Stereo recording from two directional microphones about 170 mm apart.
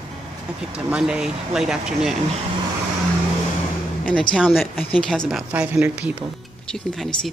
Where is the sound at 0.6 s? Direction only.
5° right (ahead or behind).